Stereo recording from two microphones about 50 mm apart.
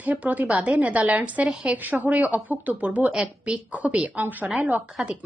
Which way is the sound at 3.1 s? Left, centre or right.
Centre.